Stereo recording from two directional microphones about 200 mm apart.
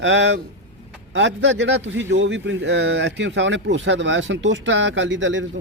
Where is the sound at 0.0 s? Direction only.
65° right (ahead or behind).